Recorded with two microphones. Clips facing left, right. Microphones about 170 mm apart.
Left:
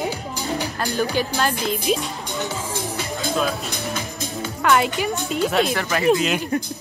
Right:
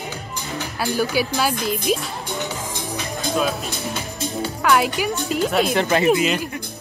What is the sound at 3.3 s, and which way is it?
Music, centre (ahead or behind).